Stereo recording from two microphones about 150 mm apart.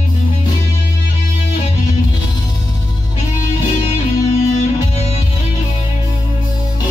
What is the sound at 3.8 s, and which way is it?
Music, 45° left (ahead or behind).